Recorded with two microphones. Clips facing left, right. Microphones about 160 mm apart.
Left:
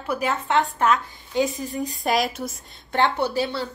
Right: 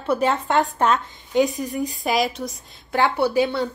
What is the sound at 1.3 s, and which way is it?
Speech, 20° right (ahead or behind).